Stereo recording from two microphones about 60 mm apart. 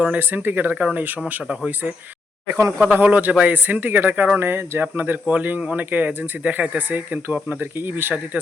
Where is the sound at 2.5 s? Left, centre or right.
Right.